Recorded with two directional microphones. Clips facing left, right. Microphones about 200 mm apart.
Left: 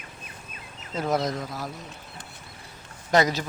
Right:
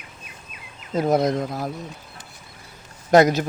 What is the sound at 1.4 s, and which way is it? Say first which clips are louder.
Speech: right 7 dB; 50° right (ahead or behind).